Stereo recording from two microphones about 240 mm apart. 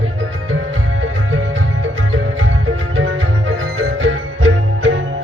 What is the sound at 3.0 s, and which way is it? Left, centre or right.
Music, right.